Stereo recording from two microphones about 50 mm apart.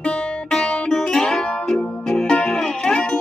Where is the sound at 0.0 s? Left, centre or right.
Left.